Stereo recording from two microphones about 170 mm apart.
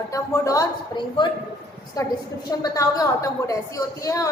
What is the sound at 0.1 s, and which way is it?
A woman's voice, 20° left (ahead or behind).